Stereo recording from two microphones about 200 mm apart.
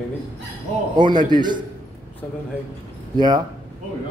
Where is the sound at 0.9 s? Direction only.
20° right (ahead or behind).